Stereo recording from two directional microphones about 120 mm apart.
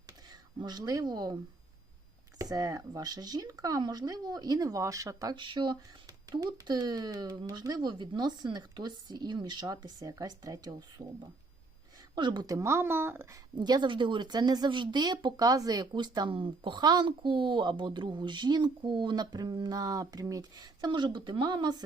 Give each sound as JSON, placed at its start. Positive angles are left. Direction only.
{"t": 0.3, "sound": "speech", "side_deg": -35}
{"t": 2.4, "sound": "speech", "side_deg": -30}
{"t": 12.1, "sound": "speech", "side_deg": -40}
{"t": 12.5, "sound": "speech", "side_deg": -25}
{"t": 13.6, "sound": "speech", "side_deg": -35}